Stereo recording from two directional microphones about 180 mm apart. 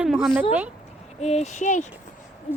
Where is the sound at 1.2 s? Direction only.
35° left (ahead or behind).